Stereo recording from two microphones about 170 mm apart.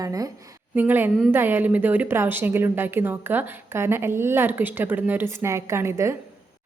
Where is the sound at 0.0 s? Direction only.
20° right (ahead or behind).